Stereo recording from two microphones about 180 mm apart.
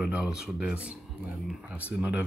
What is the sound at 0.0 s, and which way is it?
Speech, 5° right (ahead or behind).